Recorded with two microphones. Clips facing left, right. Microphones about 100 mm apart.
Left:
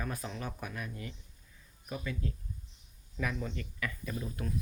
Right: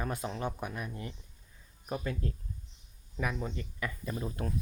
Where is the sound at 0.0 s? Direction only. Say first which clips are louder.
Right 4 dB; 25° right (ahead or behind).